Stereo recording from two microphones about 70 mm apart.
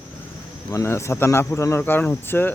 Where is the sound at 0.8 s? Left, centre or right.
Left.